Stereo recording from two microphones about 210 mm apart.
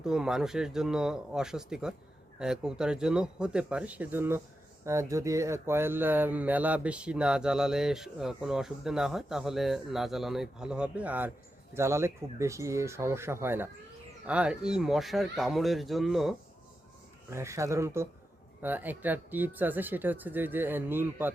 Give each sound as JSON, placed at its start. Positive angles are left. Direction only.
{"t": 0.0, "sound": "speech", "side_deg": -5}
{"t": 17.3, "sound": "speech", "side_deg": -15}